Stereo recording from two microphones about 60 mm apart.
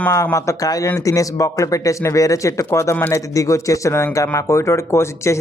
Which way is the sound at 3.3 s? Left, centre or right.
Left.